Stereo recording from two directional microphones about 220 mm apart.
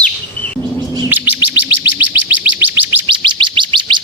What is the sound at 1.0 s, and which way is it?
Bird, 10° right (ahead or behind).